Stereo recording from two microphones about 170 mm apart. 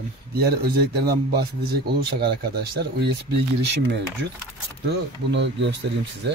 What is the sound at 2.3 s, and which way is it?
Speech, 75° right (ahead or behind).